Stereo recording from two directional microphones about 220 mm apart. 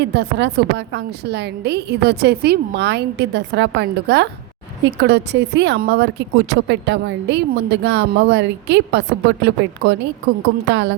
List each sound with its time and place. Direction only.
0.0 s speech: 50° right (ahead or behind)